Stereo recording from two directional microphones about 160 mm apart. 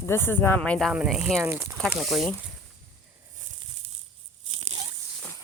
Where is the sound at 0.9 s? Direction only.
5° right (ahead or behind).